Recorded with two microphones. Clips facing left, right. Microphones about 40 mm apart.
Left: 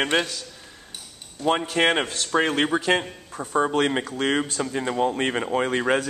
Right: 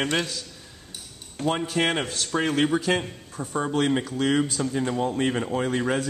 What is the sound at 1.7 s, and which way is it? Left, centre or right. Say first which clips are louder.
A man's voice: left 3 dB; centre.